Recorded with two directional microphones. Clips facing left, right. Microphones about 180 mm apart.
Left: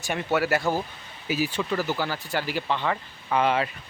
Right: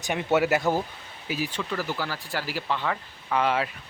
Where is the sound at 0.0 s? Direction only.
20° right (ahead or behind).